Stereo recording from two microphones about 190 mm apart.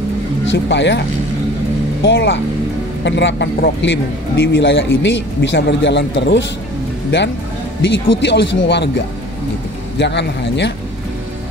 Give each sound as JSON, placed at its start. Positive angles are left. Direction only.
{"t": 0.5, "sound": "a man's voice", "side_deg": 70}
{"t": 2.0, "sound": "a man's voice", "side_deg": 70}
{"t": 7.8, "sound": "a man's voice", "side_deg": 70}